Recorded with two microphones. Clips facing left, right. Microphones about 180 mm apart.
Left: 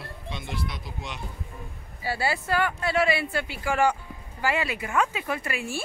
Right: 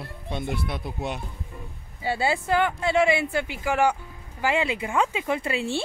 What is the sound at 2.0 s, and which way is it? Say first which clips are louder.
Speech: right 3 dB; 20° right (ahead or behind).